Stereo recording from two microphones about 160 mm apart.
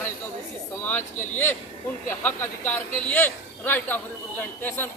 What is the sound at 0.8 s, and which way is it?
Speech, 10° left (ahead or behind).